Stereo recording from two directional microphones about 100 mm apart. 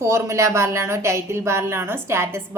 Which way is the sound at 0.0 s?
30° right (ahead or behind).